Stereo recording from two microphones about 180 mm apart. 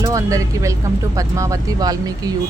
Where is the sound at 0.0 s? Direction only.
15° right (ahead or behind).